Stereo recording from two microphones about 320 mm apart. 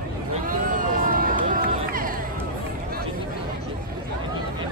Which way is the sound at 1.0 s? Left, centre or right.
Right.